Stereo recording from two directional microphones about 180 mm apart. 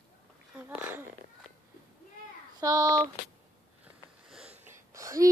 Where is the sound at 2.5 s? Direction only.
20° right (ahead or behind).